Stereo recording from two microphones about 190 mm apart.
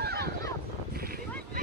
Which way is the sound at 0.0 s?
55° right (ahead or behind).